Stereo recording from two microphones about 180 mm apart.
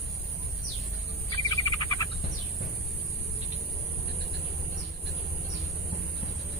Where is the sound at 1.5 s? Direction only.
25° left (ahead or behind).